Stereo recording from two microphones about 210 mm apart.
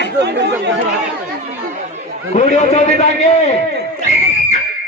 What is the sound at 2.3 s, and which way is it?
A man's voice, 35° left (ahead or behind).